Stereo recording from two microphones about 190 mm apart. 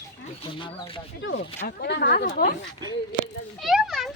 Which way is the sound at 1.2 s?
80° left.